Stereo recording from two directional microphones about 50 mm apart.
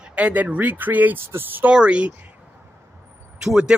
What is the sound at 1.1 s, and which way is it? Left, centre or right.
Speech, right.